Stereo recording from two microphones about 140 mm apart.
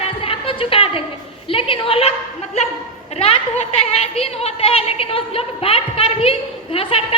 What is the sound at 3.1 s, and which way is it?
A woman's voice, 50° left (ahead or behind).